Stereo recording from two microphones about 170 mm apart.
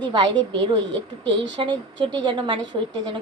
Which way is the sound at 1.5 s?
25° right (ahead or behind).